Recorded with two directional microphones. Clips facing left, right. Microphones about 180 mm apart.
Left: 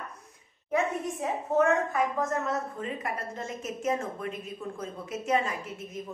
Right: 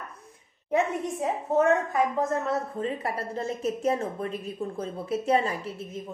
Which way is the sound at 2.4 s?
35° right (ahead or behind).